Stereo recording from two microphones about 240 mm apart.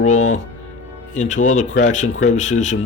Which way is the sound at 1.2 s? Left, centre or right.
Left.